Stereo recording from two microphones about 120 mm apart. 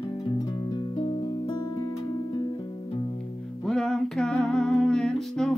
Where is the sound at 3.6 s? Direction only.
5° left (ahead or behind).